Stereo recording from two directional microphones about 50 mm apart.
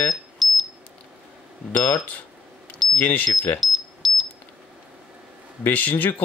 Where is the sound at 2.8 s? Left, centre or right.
Centre.